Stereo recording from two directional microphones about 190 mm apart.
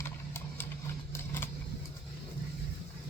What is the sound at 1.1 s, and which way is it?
Vehicle, 10° left (ahead or behind).